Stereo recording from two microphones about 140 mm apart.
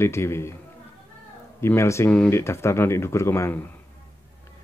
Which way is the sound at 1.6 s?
20° left (ahead or behind).